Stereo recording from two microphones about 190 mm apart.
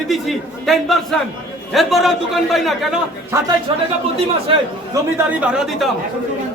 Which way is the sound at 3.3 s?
15° right (ahead or behind).